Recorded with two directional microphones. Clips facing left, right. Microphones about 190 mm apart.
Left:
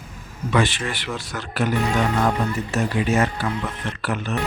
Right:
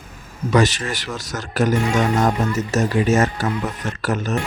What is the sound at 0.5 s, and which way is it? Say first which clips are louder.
Speech: right 4 dB; 40° right (ahead or behind).